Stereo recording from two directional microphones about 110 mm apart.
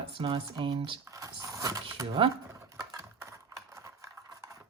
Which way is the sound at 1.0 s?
30° right (ahead or behind).